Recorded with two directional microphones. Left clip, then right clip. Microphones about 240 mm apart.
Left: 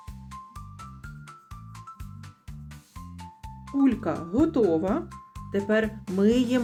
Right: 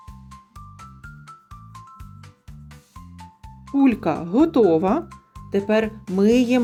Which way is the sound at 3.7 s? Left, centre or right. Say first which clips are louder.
Right 6 dB; right.